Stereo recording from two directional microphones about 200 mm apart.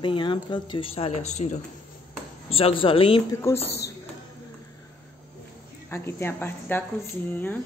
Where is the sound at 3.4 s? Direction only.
10° left (ahead or behind).